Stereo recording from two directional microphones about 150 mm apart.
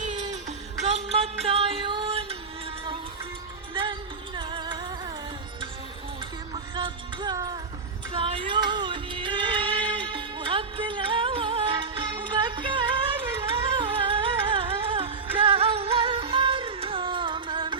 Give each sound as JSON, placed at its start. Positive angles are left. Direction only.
{"t": 0.0, "sound": "music", "side_deg": -55}
{"t": 4.4, "sound": "music", "side_deg": -30}
{"t": 6.5, "sound": "music", "side_deg": -35}
{"t": 8.1, "sound": "music", "side_deg": -35}